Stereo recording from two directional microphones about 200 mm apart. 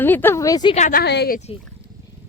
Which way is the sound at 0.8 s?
40° left (ahead or behind).